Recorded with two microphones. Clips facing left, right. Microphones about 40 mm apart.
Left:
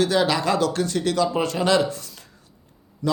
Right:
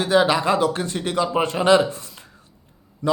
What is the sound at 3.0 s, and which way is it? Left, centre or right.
Speech, right.